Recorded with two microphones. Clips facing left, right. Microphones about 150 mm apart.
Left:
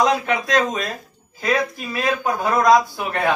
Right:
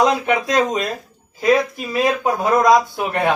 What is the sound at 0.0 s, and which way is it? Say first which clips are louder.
Speech: right 2 dB; 20° right (ahead or behind).